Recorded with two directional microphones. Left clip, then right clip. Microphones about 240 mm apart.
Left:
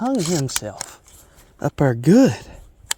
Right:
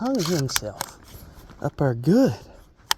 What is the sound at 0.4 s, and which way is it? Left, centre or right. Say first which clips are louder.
Speech: even; left.